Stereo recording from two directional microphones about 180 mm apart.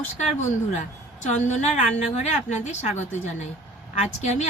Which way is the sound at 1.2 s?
40° left (ahead or behind).